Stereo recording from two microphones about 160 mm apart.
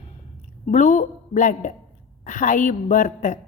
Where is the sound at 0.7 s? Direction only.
50° left (ahead or behind).